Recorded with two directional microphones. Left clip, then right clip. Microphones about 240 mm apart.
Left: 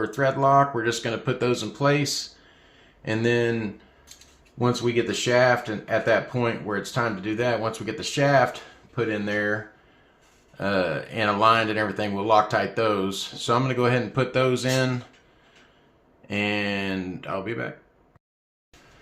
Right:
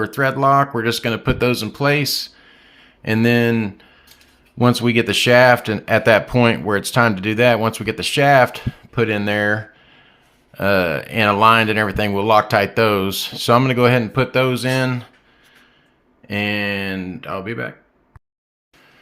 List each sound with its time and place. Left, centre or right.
0.0 s speech: right
10.6 s speech: right
16.2 s speech: right